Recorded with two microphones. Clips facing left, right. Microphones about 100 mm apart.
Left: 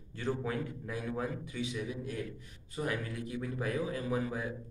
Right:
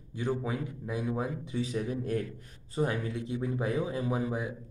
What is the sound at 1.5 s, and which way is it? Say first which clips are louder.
Speech: right 5 dB; 40° right (ahead or behind).